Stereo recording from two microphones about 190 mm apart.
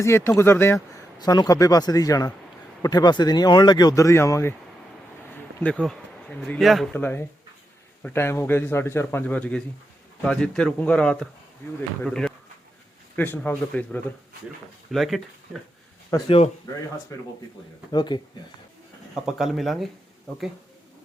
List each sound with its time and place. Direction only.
0.0 s speech: 15° left (ahead or behind)
5.5 s speech: 5° left (ahead or behind)
7.0 s speech: 10° left (ahead or behind)
16.1 s speech: 15° left (ahead or behind)
19.1 s speech: centre (ahead or behind)